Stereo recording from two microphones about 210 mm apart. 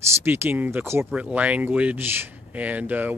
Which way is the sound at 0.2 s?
10° right (ahead or behind).